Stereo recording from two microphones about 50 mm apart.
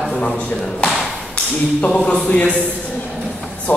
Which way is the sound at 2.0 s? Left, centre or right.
Left.